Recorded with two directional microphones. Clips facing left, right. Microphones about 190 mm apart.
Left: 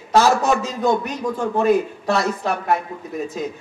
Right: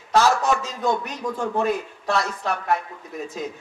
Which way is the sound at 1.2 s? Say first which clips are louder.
Left 1 dB; 30° left (ahead or behind).